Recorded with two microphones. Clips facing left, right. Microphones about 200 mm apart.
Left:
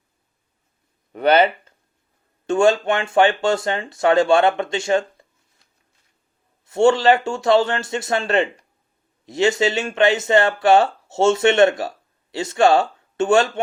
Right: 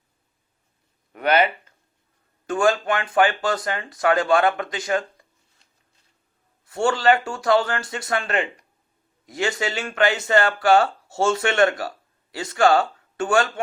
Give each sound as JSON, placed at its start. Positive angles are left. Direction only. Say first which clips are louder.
{"t": 1.1, "sound": "speech", "louder": "left 4 dB", "side_deg": 30}
{"t": 2.5, "sound": "speech", "louder": "left 4 dB", "side_deg": 25}
{"t": 6.7, "sound": "speech", "louder": "left 5 dB", "side_deg": 25}